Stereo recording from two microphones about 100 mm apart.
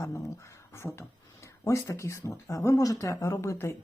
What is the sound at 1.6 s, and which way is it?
Speech, 30° left (ahead or behind).